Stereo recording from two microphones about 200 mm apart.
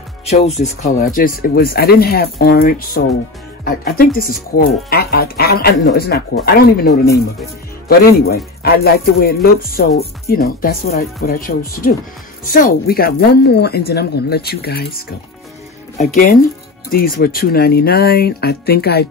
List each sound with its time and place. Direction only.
0.2 s speech: 30° left (ahead or behind)
0.9 s speech: 45° left (ahead or behind)
16.9 s speech: 45° left (ahead or behind)